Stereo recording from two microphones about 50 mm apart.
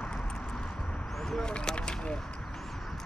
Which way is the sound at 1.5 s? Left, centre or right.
Centre.